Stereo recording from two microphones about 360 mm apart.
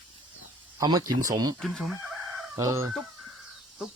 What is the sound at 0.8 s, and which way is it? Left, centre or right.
Speech, centre.